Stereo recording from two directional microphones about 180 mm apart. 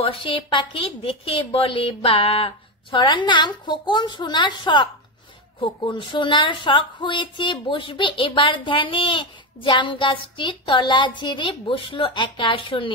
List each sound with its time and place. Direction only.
0.0 s speech: 30° left (ahead or behind)